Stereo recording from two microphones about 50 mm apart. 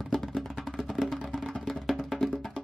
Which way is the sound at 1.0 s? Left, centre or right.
Centre.